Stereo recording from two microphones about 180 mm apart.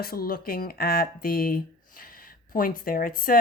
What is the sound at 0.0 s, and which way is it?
Speech, 55° left (ahead or behind).